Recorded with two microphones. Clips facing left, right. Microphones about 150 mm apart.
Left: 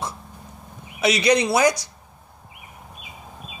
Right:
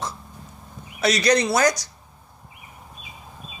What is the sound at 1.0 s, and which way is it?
Speech, 10° left (ahead or behind).